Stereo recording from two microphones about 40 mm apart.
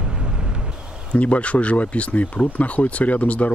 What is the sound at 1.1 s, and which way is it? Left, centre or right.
Speech, left.